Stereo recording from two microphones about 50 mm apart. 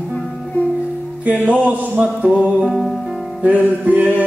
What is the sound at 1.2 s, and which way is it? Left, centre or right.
Mantra, right.